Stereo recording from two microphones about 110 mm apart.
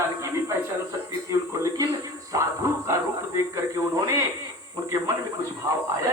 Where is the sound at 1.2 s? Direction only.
30° right (ahead or behind).